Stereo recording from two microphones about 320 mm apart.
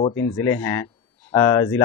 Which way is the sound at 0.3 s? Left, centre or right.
Centre.